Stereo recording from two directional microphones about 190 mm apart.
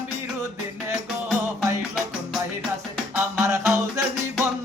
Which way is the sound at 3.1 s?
10° right (ahead or behind).